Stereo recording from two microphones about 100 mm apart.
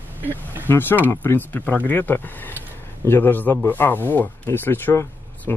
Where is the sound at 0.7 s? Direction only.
20° left (ahead or behind).